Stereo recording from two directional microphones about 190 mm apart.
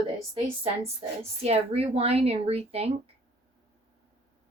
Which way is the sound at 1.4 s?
30° right (ahead or behind).